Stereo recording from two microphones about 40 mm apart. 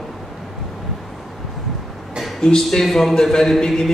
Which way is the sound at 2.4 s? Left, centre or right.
Centre.